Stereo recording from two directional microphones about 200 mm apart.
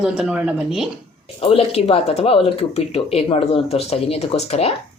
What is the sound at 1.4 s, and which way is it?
Speech, 30° left (ahead or behind).